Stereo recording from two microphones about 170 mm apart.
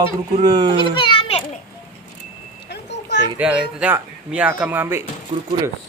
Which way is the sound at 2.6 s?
85° left.